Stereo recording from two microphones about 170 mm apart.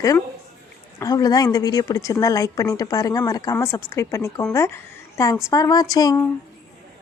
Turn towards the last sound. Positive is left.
turn(degrees=20)  # may be behind; listen again after turning